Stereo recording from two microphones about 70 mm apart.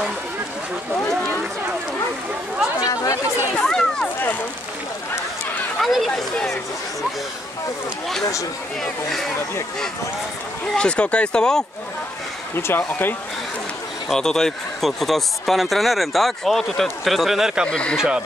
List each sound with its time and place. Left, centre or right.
2.8 s chatter: left
3.6 s a sound: centre
5.8 s speech: centre
10.8 s speech: centre
12.5 s speech: left
14.0 s speech: centre
17.6 s speech: centre
17.9 s speech: centre